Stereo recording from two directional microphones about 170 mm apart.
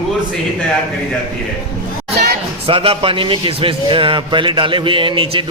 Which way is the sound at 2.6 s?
30° right (ahead or behind).